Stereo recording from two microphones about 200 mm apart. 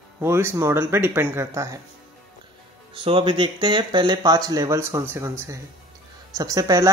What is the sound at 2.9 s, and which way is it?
Speech, 25° right (ahead or behind).